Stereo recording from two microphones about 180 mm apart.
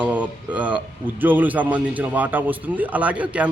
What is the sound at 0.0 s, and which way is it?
A man's voice, 10° right (ahead or behind).